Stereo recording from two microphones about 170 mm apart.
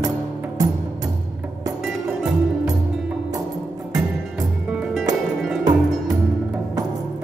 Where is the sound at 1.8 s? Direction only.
5° right (ahead or behind).